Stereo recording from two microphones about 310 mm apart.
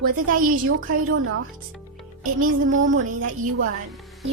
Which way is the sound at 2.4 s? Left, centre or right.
Right.